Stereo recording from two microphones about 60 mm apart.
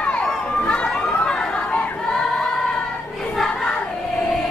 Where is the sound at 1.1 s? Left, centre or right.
Centre.